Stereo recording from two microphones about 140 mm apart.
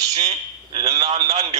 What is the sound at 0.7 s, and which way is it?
Speech, 45° right (ahead or behind).